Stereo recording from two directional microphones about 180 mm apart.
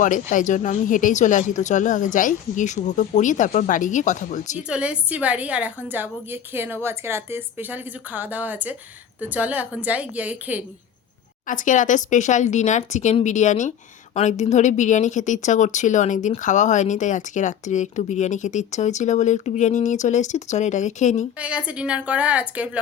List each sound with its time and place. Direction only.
0.0 s speech: 45° left (ahead or behind)
4.7 s a woman's voice: 5° right (ahead or behind)
11.4 s speech: 45° left (ahead or behind)
21.3 s a woman's voice: 5° right (ahead or behind)